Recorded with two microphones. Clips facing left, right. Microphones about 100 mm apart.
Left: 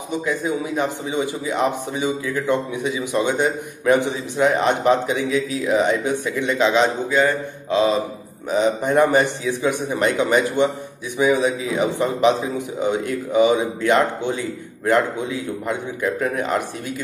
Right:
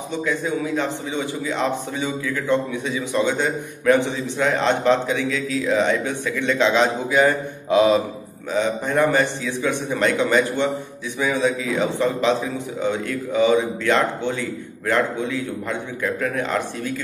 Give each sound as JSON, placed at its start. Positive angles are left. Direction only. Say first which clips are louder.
{"t": 0.2, "sound": "a man's voice", "louder": "right 1 dB", "side_deg": 15}
{"t": 7.1, "sound": "a man's voice", "louder": "right 1 dB", "side_deg": -10}
{"t": 8.5, "sound": "a man's voice", "louder": "left 3 dB", "side_deg": 20}